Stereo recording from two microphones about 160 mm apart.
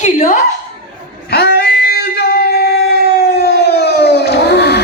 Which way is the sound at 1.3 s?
90° left.